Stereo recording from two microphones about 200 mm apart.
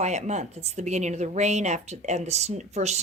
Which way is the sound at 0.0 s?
35° right (ahead or behind).